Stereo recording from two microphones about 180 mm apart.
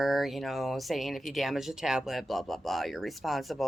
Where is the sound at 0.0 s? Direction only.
Centre (ahead or behind).